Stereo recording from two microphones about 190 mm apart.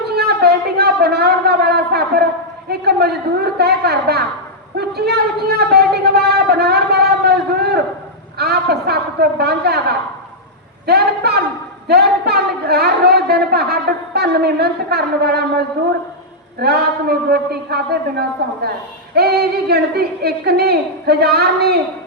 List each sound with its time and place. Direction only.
0.2 s a sound: 55° right (ahead or behind)
2.6 s a woman's voice: 55° right (ahead or behind)
10.8 s a woman's voice: 55° right (ahead or behind)
19.1 s a woman's voice: 55° right (ahead or behind)